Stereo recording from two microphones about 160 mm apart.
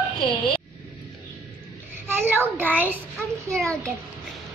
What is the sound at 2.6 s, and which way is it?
Speech, 10° right (ahead or behind).